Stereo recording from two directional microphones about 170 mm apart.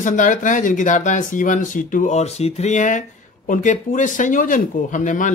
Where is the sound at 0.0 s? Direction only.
50° left (ahead or behind).